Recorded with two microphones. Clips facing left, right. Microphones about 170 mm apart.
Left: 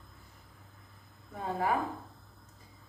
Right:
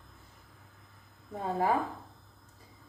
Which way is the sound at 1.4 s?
30° right (ahead or behind).